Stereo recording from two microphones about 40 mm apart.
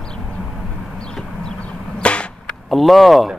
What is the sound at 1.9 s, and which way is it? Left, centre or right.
Arrow, left.